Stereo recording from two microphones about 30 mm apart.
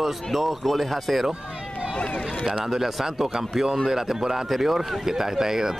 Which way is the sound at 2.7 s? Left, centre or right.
Centre.